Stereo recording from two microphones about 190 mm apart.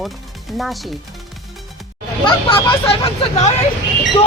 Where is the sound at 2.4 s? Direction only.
30° left (ahead or behind).